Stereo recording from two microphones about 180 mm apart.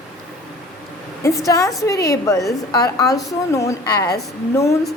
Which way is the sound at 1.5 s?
20° left (ahead or behind).